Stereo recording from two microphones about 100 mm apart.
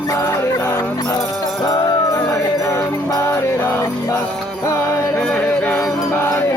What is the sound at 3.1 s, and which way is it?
Music, 30° left (ahead or behind).